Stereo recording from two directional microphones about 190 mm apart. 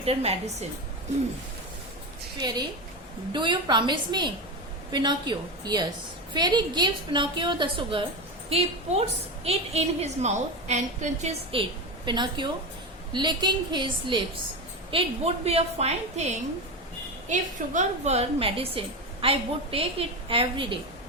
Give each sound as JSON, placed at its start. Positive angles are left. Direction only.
{"t": 0.0, "sound": "a woman's voice", "side_deg": -35}
{"t": 2.4, "sound": "a woman's voice", "side_deg": -20}
{"t": 12.0, "sound": "a woman's voice", "side_deg": -25}